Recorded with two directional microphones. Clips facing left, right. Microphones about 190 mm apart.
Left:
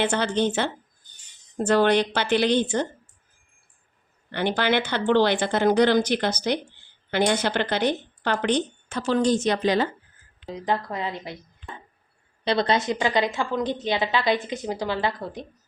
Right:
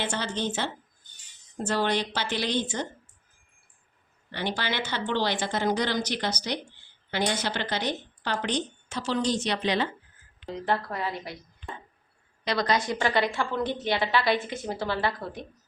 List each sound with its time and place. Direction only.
0.0 s a woman's voice: 60° left (ahead or behind)
4.3 s a woman's voice: 55° left (ahead or behind)
10.4 s a woman's voice: 15° left (ahead or behind)
12.5 s a woman's voice: 25° left (ahead or behind)